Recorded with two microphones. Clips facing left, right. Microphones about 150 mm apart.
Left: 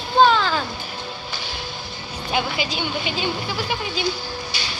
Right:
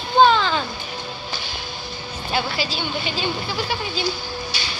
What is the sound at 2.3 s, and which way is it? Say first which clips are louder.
Speech: left 1 dB; 15° left (ahead or behind).